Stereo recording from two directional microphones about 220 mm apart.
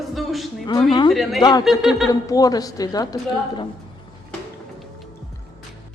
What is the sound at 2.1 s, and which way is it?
Speech, 15° left (ahead or behind).